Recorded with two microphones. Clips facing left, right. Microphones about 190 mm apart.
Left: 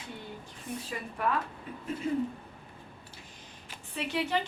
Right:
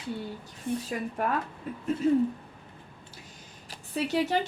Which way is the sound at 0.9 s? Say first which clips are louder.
Right 3 dB; 45° right (ahead or behind).